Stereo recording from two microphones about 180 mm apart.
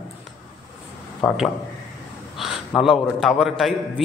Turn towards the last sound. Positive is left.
turn(degrees=0)  # may be behind; listen again after turning